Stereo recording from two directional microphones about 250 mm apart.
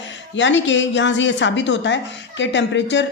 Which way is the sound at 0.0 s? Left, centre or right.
Left.